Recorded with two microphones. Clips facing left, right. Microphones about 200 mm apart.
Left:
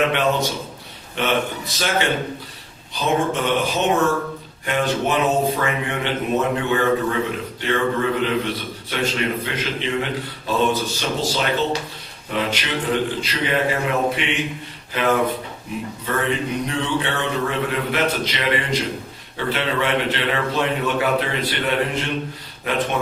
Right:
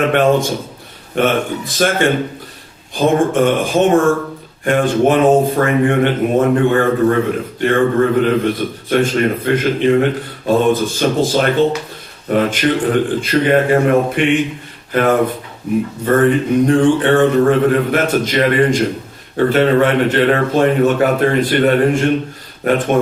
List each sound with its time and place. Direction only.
0.1 s a man's voice: 50° right (ahead or behind)